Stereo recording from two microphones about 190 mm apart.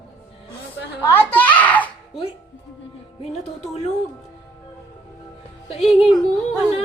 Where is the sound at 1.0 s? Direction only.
10° left (ahead or behind).